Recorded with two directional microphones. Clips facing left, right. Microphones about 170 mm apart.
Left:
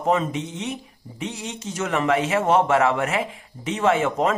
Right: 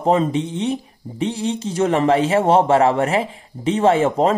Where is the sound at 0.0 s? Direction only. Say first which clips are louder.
Right 5 dB; 30° right (ahead or behind).